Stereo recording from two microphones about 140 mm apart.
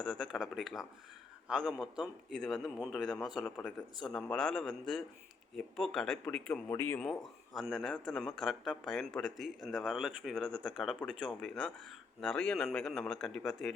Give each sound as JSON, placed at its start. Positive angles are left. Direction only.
{"t": 0.1, "sound": "a sound", "side_deg": 0}
{"t": 1.5, "sound": "a man's voice", "side_deg": -5}
{"t": 7.0, "sound": "a man's voice", "side_deg": 0}
{"t": 11.3, "sound": "a man's voice", "side_deg": 10}